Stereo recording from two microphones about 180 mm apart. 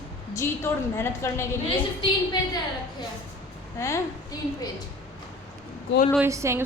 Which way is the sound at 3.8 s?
15° left (ahead or behind).